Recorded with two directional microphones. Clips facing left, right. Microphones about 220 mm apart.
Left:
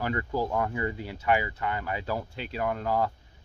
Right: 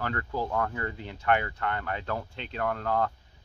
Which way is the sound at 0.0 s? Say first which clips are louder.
Left 3 dB; 10° left (ahead or behind).